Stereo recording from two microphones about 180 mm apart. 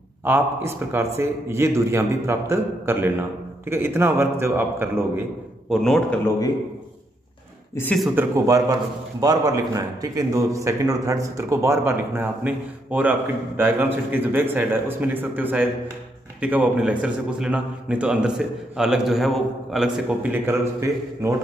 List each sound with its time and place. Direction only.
0.2 s a man's voice: 10° right (ahead or behind)
5.7 s a man's voice: centre (ahead or behind)
7.7 s speech: 10° left (ahead or behind)
8.0 s a man's voice: 10° right (ahead or behind)